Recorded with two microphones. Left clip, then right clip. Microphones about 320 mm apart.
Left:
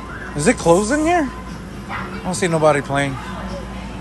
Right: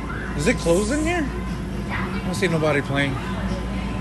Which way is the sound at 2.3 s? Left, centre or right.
Centre.